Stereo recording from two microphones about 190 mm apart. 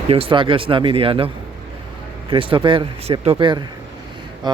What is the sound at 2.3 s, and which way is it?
Speech, 25° right (ahead or behind).